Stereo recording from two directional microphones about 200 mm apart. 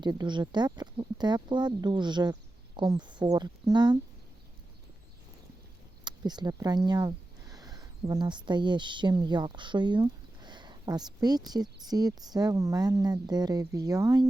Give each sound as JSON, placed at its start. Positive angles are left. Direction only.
{"t": 0.0, "sound": "speech", "side_deg": -20}
{"t": 6.1, "sound": "speech", "side_deg": -20}